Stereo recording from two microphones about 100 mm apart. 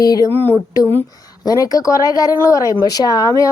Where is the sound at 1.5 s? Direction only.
40° left (ahead or behind).